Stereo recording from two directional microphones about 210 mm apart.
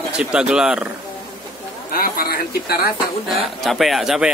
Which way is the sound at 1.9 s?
45° left (ahead or behind).